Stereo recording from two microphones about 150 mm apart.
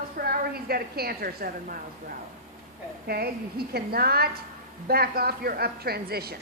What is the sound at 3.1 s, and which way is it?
A woman's voice, 90° right.